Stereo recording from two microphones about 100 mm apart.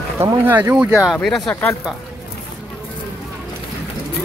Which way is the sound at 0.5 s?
20° right (ahead or behind).